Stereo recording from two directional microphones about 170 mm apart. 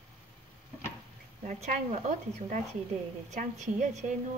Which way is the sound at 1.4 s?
45° right (ahead or behind).